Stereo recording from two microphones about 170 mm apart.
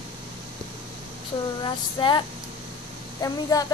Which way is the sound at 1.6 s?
25° left (ahead or behind).